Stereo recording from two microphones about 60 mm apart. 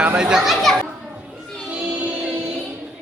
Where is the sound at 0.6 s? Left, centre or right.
Centre.